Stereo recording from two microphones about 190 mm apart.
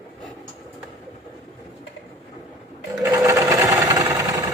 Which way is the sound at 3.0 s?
15° right (ahead or behind).